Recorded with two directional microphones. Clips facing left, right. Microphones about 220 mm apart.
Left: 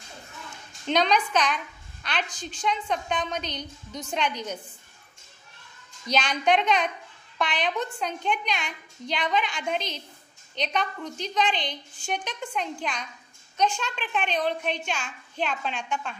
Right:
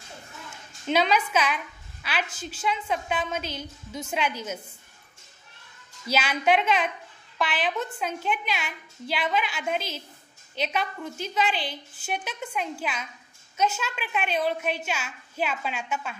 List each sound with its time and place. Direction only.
0.8 s a woman's voice: 5° right (ahead or behind)
6.0 s a woman's voice: 5° right (ahead or behind)